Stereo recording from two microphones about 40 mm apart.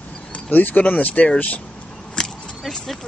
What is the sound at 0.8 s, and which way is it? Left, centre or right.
Speech, left.